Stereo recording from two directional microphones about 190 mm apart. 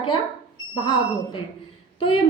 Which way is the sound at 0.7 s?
25° left (ahead or behind).